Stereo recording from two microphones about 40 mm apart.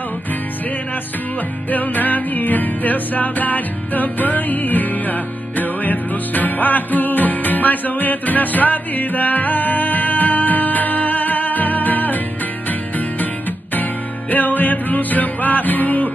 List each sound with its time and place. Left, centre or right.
1.7 s music: left
14.3 s music: left